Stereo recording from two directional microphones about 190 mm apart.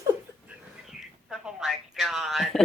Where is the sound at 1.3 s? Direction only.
Centre (ahead or behind).